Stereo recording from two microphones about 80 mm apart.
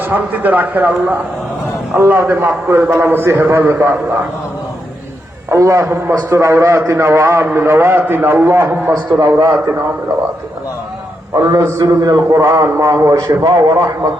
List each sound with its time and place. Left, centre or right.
0.0 s a man's voice: right
5.5 s a man's voice: right
8.9 s a man's voice: right
11.3 s a man's voice: right
13.4 s a man's voice: right